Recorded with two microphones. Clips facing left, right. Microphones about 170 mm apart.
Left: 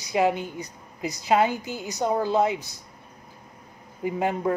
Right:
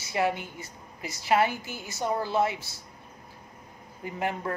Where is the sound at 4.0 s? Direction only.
20° left (ahead or behind).